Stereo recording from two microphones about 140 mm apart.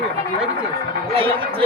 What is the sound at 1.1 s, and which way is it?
Speech, 40° right (ahead or behind).